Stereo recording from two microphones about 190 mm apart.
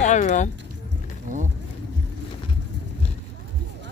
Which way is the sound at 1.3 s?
45° right (ahead or behind).